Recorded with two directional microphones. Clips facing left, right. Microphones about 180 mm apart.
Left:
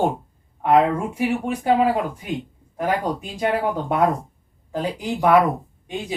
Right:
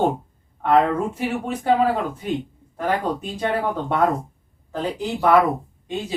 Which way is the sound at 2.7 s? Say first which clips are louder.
Even; 10° left (ahead or behind).